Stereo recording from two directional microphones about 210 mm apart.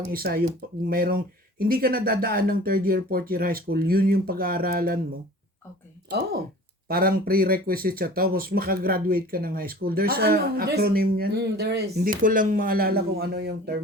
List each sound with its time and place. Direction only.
0.0 s speech: 45° right (ahead or behind)
6.1 s speech: 50° right (ahead or behind)